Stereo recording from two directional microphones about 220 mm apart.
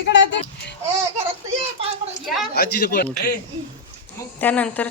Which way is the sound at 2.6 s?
45° left (ahead or behind).